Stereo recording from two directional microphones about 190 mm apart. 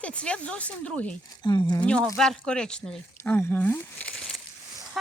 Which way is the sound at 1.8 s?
5° left (ahead or behind).